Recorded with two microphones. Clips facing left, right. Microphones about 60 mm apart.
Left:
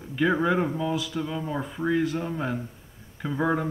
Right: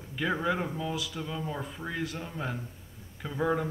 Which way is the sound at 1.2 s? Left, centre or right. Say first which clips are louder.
Left 5 dB; left.